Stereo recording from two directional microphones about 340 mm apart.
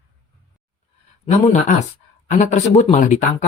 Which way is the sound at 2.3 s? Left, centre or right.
Left.